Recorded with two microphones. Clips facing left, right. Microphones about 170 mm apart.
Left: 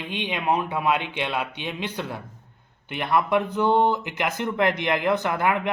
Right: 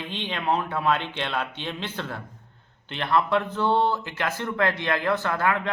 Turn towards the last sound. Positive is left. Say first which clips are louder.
# left 2 dB
turn(degrees=15)  # may be behind; listen again after turning